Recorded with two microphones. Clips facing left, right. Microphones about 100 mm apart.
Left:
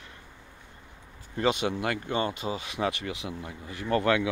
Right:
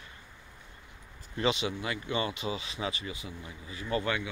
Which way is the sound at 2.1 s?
45° left (ahead or behind).